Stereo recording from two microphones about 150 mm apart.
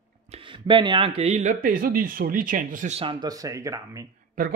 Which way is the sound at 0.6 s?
35° right (ahead or behind).